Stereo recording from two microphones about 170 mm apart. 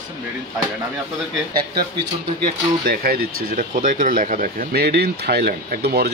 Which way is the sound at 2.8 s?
60° right (ahead or behind).